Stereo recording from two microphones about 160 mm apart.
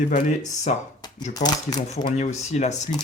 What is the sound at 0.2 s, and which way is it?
Speech, 50° left (ahead or behind).